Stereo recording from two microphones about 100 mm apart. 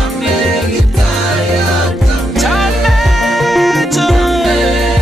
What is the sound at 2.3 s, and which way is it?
Music, centre (ahead or behind).